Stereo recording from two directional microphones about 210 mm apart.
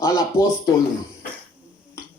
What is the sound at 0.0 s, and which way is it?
Speech, 15° left (ahead or behind).